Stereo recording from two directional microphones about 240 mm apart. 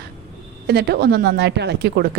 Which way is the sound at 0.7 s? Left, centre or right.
Right.